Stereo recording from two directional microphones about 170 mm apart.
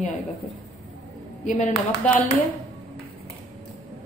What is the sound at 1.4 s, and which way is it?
Speech, 45° left (ahead or behind).